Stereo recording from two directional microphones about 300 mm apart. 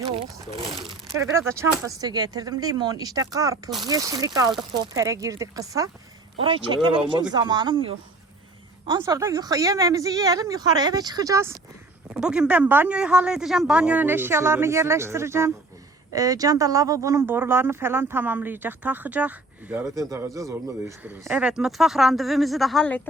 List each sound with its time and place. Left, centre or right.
1.5 s speech: centre